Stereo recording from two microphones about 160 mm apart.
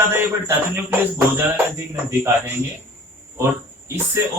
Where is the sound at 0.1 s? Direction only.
15° right (ahead or behind).